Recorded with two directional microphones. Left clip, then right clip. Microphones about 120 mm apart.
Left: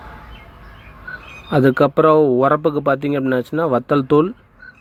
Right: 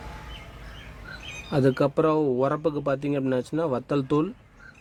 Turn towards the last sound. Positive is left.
turn(degrees=20)  # may be behind; listen again after turning